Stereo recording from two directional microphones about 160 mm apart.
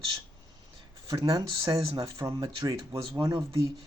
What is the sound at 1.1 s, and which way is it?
Speech, 20° right (ahead or behind).